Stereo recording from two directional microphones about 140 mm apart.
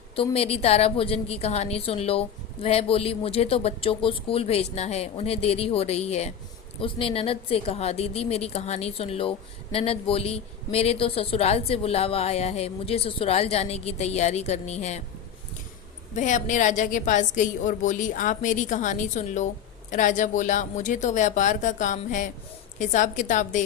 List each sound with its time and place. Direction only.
0.2 s a woman's voice: 45° left (ahead or behind)
16.1 s a woman's voice: 60° left (ahead or behind)